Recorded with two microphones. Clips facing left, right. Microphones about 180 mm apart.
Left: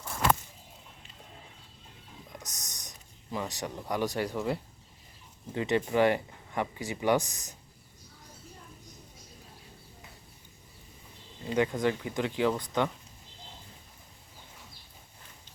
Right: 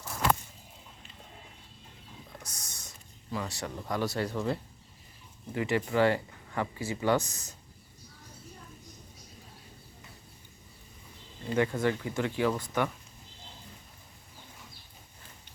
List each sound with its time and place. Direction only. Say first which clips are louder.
2.4 s a sound: left 1 dB; 20° left (ahead or behind)
3.3 s speech: left 1 dB; 15° left (ahead or behind)
5.5 s speech: left 1 dB; 20° left (ahead or behind)
11.4 s speech: even; 15° left (ahead or behind)